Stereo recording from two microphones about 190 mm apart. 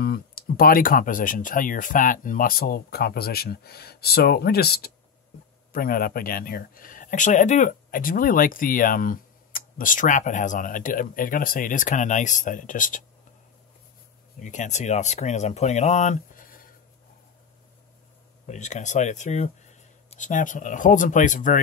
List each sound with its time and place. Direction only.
0.0 s speech: 50° left (ahead or behind)
14.4 s speech: 40° left (ahead or behind)
18.5 s speech: 40° left (ahead or behind)